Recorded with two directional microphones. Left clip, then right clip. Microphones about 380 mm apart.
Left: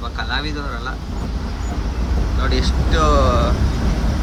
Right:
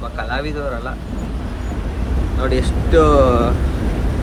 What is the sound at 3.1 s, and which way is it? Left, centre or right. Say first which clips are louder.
Speech: right 4 dB; right.